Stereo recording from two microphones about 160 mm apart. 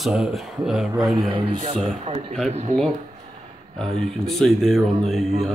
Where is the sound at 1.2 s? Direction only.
35° right (ahead or behind).